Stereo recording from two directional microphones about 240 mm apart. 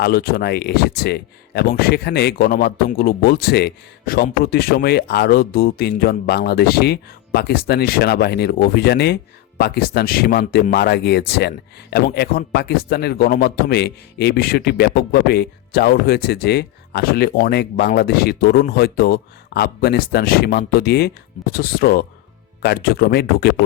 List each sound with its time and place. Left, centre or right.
0.0 s speech: left